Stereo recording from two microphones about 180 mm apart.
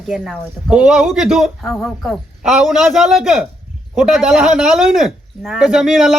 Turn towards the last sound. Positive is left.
turn(degrees=0)  # may be behind; listen again after turning